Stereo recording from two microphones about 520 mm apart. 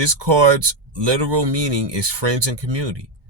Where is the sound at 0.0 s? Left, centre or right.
Right.